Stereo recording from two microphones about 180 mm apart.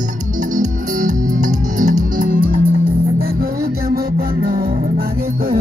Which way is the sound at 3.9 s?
55° right (ahead or behind).